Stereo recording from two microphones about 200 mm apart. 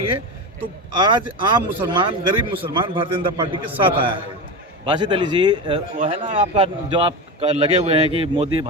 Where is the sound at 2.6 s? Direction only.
25° right (ahead or behind).